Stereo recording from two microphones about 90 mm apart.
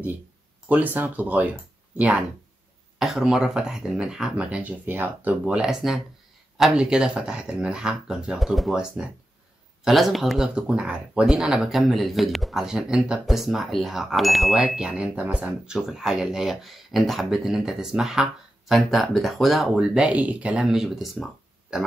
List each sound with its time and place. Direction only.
0.7 s speech: 20° right (ahead or behind)
3.0 s speech: 5° right (ahead or behind)